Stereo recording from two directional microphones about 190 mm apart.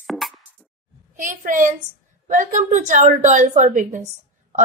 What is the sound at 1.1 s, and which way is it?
A woman's voice, 45° right (ahead or behind).